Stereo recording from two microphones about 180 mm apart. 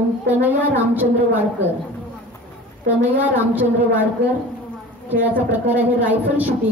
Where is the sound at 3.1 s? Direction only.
10° right (ahead or behind).